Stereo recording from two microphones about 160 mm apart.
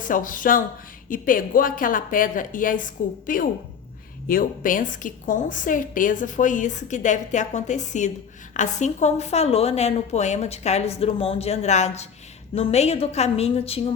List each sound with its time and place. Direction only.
0.0 s a woman's voice: 55° left (ahead or behind); by 13.9 s 40° left (ahead or behind)